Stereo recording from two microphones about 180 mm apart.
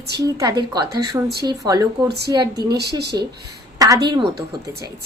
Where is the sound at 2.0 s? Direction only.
65° right (ahead or behind).